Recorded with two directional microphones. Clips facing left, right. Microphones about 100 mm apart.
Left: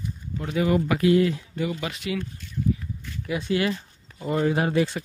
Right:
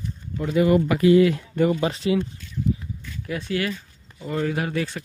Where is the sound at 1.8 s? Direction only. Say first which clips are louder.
Right 7 dB; 30° right (ahead or behind).